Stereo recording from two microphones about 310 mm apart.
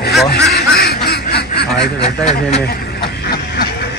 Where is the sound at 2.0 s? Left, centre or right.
Left.